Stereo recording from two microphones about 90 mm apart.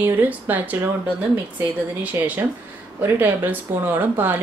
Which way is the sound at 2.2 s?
35° right (ahead or behind).